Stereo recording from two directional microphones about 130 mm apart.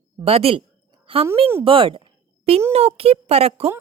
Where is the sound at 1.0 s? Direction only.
45° right (ahead or behind).